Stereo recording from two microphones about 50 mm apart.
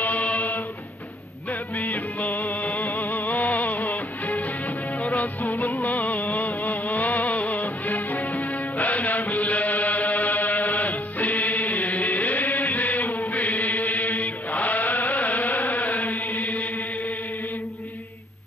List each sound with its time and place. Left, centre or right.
0.0 s music: left